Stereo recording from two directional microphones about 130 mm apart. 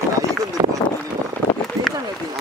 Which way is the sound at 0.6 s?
30° right (ahead or behind).